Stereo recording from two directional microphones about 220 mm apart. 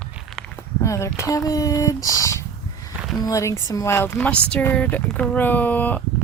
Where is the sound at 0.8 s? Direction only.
15° left (ahead or behind).